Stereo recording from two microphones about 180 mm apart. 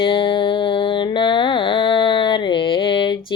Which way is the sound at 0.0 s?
30° left (ahead or behind).